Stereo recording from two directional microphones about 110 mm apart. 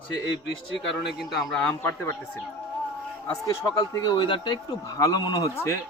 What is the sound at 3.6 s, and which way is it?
Speech, 30° left (ahead or behind).